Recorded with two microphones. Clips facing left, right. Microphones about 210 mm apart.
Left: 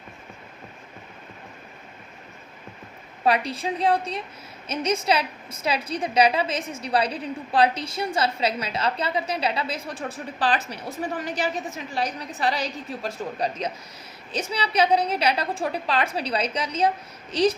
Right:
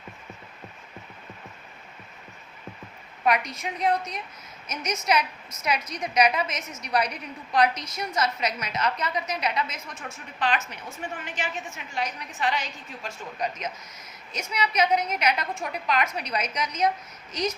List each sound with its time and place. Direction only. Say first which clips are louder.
3.2 s a woman's voice: left 3 dB; 30° left (ahead or behind)